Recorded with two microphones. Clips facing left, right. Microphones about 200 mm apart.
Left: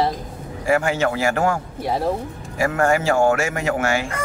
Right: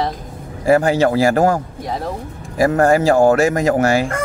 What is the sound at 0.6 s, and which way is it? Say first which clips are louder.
Speech: right 6 dB; 35° right (ahead or behind).